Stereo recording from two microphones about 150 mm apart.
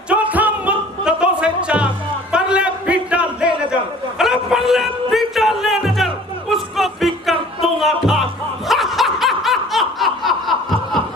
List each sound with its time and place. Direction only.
0.1 s music: 10° right (ahead or behind)
2.3 s a sound: 5° right (ahead or behind)
4.2 s music: 5° right (ahead or behind)
8.6 s laughter: centre (ahead or behind)